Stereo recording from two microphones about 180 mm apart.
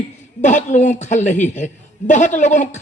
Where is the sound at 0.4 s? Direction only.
40° left (ahead or behind).